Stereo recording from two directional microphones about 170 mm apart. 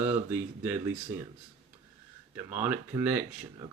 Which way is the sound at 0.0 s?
10° right (ahead or behind).